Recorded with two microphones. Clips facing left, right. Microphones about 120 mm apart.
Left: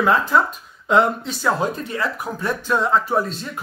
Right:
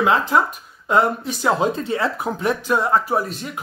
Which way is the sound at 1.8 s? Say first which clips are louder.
Right 3 dB; 25° right (ahead or behind).